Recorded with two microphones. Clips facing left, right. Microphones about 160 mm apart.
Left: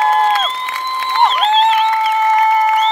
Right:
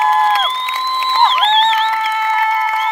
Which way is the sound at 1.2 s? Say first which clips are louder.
Left 1 dB; 5° left (ahead or behind).